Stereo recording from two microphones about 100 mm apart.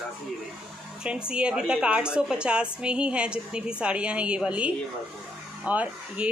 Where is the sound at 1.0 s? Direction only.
10° right (ahead or behind).